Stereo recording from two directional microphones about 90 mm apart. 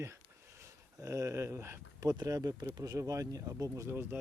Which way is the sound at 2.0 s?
40° right (ahead or behind).